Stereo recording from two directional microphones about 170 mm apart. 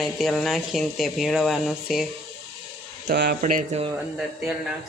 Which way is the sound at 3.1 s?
70° right (ahead or behind).